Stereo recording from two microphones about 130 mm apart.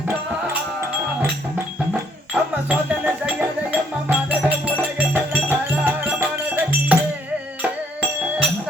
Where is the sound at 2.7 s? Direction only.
10° right (ahead or behind).